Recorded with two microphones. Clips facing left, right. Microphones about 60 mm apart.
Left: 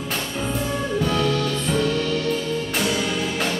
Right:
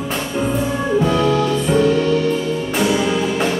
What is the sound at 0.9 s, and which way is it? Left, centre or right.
Music, centre.